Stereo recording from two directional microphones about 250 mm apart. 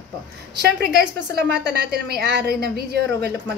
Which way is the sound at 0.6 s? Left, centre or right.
Right.